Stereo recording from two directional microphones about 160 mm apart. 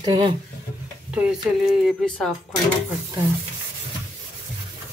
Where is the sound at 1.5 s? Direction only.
5° right (ahead or behind).